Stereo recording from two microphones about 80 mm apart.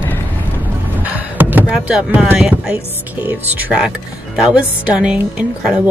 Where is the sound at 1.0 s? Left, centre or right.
Right.